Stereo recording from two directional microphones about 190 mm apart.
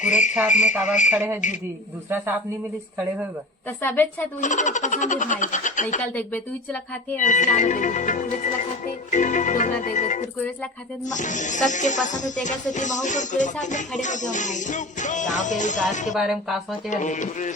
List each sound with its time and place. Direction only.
0.0 s speech: 40° left (ahead or behind)
1.1 s a man's voice: 10° right (ahead or behind)
3.7 s speech: 10° left (ahead or behind)
4.4 s speech: 40° left (ahead or behind)
6.1 s speech: 10° left (ahead or behind)
7.2 s speech: 40° left (ahead or behind)
16.1 s speech: centre (ahead or behind)
16.9 s speech: 40° left (ahead or behind)